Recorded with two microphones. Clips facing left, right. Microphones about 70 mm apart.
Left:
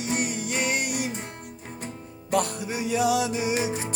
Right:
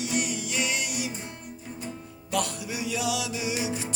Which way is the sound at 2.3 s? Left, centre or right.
Left.